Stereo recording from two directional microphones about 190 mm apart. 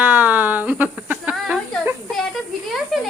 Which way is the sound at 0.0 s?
10° right (ahead or behind).